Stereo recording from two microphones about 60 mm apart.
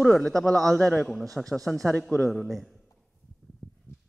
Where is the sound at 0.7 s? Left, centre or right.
Left.